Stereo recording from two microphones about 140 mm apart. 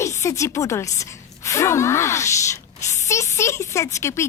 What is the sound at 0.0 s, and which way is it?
Speech, 20° left (ahead or behind).